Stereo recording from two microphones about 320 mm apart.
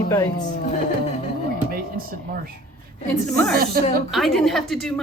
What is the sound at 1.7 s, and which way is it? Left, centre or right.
Speech, right.